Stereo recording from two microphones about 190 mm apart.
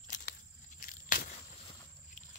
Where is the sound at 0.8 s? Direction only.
45° left (ahead or behind).